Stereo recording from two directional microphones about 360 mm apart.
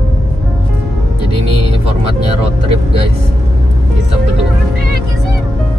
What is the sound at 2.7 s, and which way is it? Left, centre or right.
Vehicle, centre.